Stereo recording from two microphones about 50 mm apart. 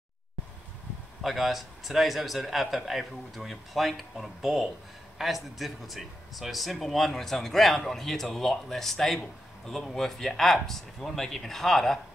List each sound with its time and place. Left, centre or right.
1.2 s speech: centre